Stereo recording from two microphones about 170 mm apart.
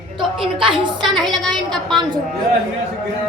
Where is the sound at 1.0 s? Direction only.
Centre (ahead or behind).